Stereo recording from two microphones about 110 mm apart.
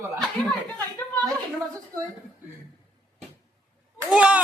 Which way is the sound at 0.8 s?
20° left (ahead or behind).